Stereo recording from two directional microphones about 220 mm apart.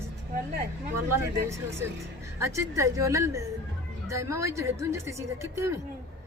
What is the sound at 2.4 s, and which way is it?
A woman's voice, 15° right (ahead or behind).